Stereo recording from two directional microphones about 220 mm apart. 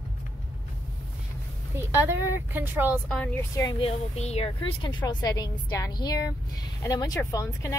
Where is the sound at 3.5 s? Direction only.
15° left (ahead or behind).